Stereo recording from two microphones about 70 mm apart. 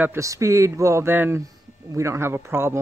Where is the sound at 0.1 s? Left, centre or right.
Right.